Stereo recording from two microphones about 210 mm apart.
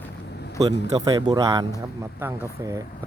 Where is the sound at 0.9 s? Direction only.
20° right (ahead or behind).